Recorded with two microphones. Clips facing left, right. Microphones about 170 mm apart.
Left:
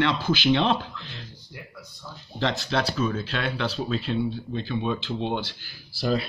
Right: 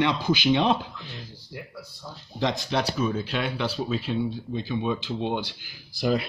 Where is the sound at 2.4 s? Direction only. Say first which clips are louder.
Even; 15° right (ahead or behind).